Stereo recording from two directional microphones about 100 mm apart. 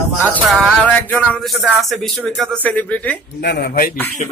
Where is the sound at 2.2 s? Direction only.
15° left (ahead or behind).